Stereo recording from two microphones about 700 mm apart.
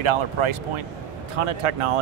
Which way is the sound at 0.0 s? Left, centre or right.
Right.